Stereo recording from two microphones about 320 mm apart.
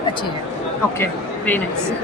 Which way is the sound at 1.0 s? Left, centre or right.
Centre.